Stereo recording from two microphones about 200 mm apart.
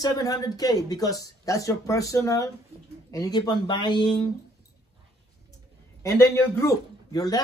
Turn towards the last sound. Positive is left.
turn(degrees=20)  # may be behind; listen again after turning